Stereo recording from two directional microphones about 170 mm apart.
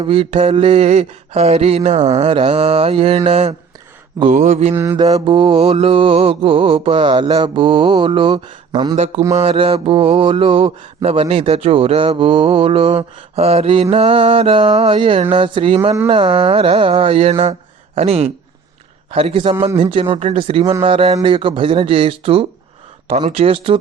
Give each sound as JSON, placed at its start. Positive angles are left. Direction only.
{"t": 0.0, "sound": "mantra", "side_deg": -30}
{"t": 4.3, "sound": "mantra", "side_deg": -50}
{"t": 4.7, "sound": "mantra", "side_deg": -15}
{"t": 5.1, "sound": "mantra", "side_deg": -30}
{"t": 9.3, "sound": "mantra", "side_deg": -40}
{"t": 17.9, "sound": "speech", "side_deg": -40}
{"t": 19.1, "sound": "mantra", "side_deg": -30}